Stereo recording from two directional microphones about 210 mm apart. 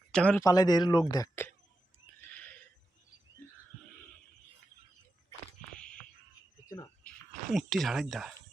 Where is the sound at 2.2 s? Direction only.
10° left (ahead or behind).